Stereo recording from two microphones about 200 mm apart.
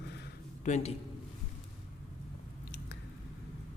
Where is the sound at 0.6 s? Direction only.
35° left (ahead or behind).